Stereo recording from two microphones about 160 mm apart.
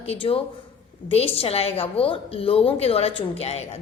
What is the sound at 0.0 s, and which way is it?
A woman's voice, 35° left (ahead or behind).